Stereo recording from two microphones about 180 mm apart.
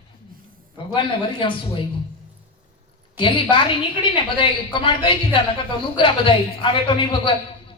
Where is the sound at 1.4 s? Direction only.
25° left (ahead or behind).